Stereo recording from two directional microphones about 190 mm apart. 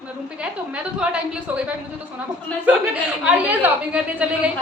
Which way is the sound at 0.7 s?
5° right (ahead or behind).